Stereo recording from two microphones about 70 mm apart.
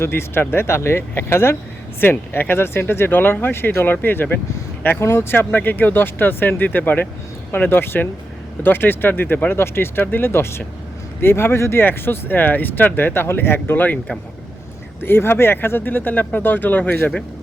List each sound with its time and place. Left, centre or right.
0.0 s speech: left
15.0 s speech: left